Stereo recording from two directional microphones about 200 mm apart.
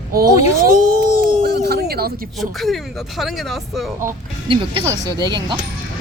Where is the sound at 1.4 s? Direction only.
50° right (ahead or behind).